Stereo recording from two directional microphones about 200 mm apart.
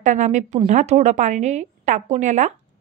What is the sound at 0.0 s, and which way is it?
A woman's voice, 35° right (ahead or behind).